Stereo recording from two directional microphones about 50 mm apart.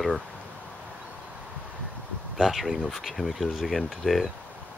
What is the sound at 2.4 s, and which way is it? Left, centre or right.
Speech, centre.